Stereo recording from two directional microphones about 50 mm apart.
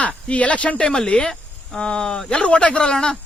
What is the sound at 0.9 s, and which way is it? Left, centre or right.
Speech, centre.